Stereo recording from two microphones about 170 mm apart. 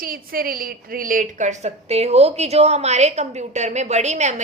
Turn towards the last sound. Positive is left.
turn(degrees=-45)  # may be behind; listen again after turning